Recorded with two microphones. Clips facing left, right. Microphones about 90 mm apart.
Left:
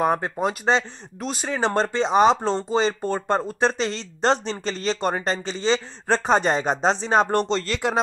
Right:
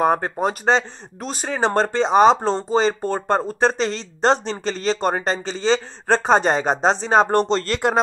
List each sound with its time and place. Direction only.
0.0 s speech: 45° right (ahead or behind)